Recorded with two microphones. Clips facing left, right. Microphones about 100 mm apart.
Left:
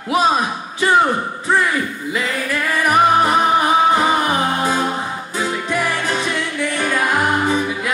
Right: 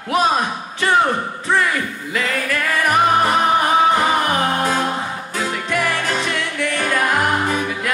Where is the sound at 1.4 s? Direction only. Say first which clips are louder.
Left 1 dB; 15° left (ahead or behind).